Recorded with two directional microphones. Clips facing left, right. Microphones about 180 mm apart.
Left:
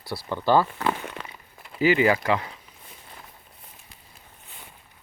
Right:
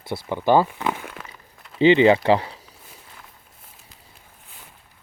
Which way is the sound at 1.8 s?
25° right (ahead or behind).